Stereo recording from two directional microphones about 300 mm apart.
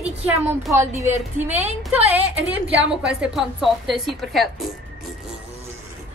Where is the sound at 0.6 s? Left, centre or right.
Centre.